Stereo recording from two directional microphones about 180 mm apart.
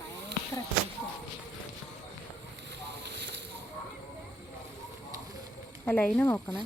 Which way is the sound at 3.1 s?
70° right (ahead or behind).